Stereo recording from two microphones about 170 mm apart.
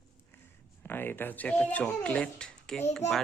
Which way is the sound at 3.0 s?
40° left (ahead or behind).